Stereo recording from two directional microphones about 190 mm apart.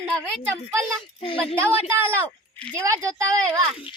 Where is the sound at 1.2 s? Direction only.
30° left (ahead or behind).